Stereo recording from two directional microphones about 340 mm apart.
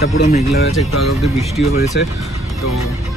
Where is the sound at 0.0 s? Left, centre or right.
Left.